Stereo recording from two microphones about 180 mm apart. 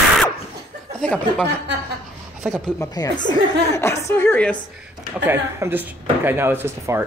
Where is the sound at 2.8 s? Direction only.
20° left (ahead or behind).